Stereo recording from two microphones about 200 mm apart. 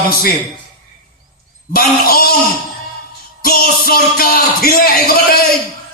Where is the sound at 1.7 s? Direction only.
50° left (ahead or behind).